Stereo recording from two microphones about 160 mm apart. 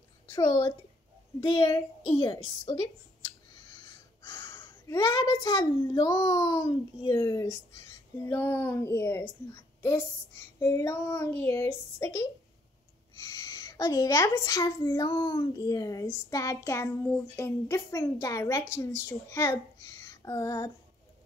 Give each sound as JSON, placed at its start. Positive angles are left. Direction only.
{"t": 0.3, "sound": "a woman's voice", "side_deg": 20}